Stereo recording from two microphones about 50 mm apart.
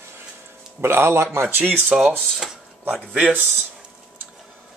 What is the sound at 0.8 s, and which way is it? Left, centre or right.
Speech, right.